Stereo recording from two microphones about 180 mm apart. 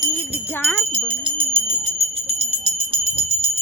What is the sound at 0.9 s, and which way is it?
Jingle bell, 35° right (ahead or behind).